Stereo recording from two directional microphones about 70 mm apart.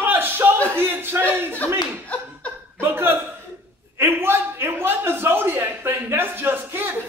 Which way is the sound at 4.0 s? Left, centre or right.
Right.